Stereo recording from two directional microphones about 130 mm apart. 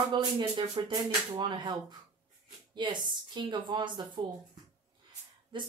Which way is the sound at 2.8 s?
35° right (ahead or behind).